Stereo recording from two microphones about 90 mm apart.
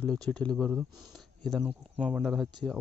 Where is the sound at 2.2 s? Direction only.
Centre (ahead or behind).